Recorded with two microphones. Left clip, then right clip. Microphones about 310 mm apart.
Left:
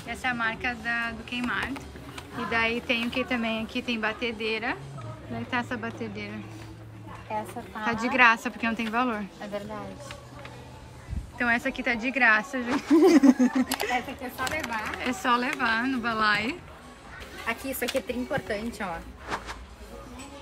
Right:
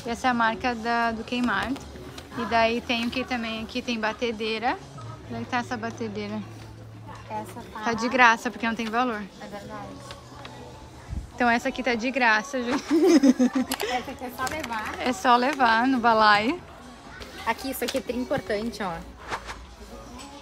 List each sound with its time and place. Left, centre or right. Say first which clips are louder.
0.1 s a woman's voice: right 5 dB; centre
7.8 s a woman's voice: right 1 dB; centre
11.3 s a woman's voice: right 3 dB; centre
17.5 s speech: right 2 dB; right
19.2 s a sound: even; centre